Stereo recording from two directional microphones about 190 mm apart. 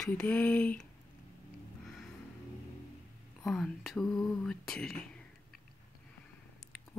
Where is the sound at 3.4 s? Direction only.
Centre (ahead or behind).